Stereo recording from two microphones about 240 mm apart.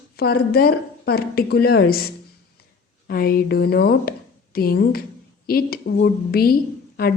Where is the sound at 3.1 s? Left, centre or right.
Left.